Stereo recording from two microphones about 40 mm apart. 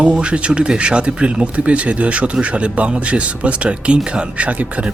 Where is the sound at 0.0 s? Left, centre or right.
Right.